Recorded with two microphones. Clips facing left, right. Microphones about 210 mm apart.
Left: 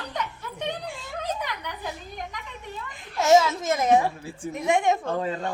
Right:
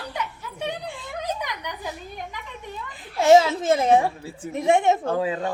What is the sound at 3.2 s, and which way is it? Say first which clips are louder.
A child's voice: right 3 dB; 30° right (ahead or behind).